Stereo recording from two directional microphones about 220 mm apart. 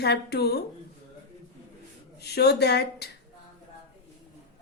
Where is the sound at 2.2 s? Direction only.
45° left (ahead or behind).